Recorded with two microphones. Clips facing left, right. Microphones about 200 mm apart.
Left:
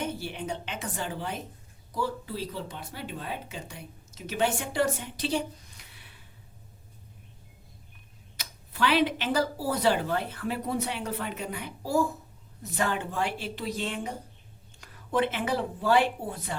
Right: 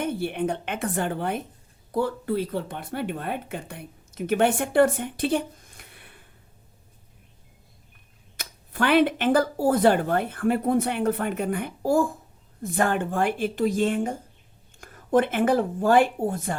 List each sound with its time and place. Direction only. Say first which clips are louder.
0.0 s speech: right 7 dB; 55° right (ahead or behind)
8.4 s speech: right 2 dB; 50° right (ahead or behind)